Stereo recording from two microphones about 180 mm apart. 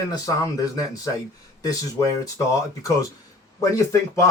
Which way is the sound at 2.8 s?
20° left (ahead or behind).